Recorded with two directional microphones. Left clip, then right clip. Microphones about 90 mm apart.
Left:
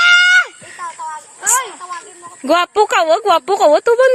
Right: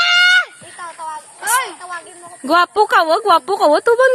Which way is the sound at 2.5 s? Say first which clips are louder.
Even; 5° left (ahead or behind).